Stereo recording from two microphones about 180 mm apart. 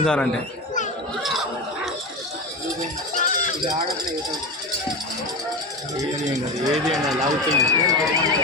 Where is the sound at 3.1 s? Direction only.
45° left (ahead or behind).